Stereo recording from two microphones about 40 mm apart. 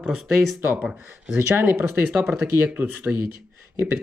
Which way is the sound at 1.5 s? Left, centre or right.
Right.